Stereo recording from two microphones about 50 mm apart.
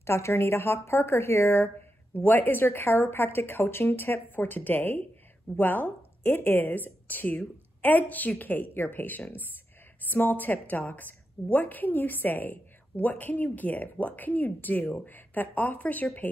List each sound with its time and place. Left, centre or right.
0.0 s a woman's voice: left
2.1 s a woman's voice: left